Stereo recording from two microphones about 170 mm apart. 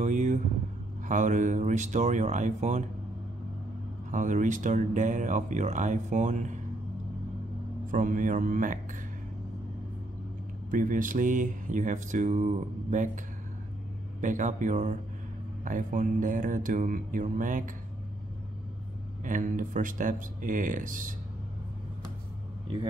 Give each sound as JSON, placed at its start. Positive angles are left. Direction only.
{"t": 0.0, "sound": "vehicle", "side_deg": -45}
{"t": 1.0, "sound": "mantra", "side_deg": -50}
{"t": 4.1, "sound": "mantra", "side_deg": -45}
{"t": 7.9, "sound": "mantra", "side_deg": -50}
{"t": 10.7, "sound": "mantra", "side_deg": -55}
{"t": 14.2, "sound": "mantra", "side_deg": -50}
{"t": 19.2, "sound": "mantra", "side_deg": -50}